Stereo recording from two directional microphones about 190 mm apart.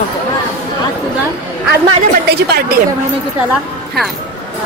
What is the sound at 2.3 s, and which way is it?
Speech, 55° right (ahead or behind).